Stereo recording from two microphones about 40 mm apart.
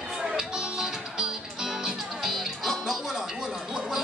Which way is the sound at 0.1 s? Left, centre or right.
Centre.